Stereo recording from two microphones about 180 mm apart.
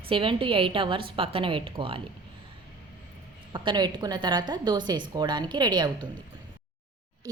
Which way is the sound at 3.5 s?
25° right (ahead or behind).